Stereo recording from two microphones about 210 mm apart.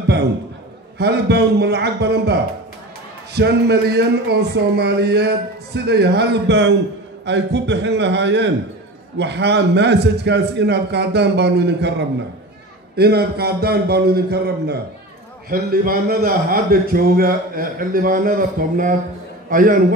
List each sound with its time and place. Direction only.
0.9 s a man's voice: 50° right (ahead or behind)